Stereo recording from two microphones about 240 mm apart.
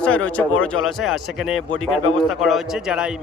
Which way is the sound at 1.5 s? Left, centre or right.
Left.